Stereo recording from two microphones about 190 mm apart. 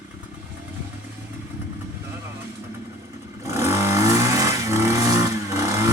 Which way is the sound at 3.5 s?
15° right (ahead or behind).